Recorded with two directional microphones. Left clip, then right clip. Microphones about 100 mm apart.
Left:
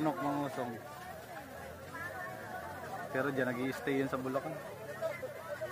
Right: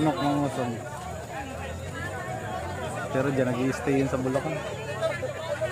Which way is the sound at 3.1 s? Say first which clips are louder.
Right 8 dB; 50° left (ahead or behind).